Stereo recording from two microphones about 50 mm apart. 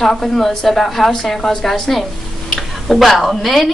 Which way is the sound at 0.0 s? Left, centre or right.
Centre.